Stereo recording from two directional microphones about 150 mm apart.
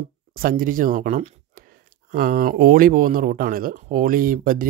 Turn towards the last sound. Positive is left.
turn(degrees=-70)  # may be behind; listen again after turning